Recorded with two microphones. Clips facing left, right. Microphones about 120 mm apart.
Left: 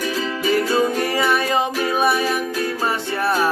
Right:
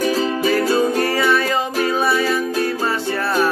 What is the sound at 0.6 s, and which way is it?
Music, 15° left (ahead or behind).